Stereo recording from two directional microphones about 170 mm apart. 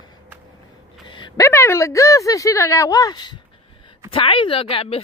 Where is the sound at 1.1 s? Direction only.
30° left (ahead or behind).